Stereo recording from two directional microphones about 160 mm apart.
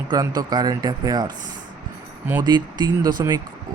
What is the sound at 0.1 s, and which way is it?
Speech, 25° right (ahead or behind).